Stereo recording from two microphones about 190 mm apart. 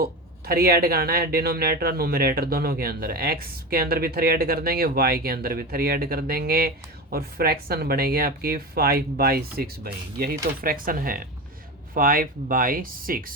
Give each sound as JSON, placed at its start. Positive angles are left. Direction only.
{"t": 0.0, "sound": "speech", "side_deg": -55}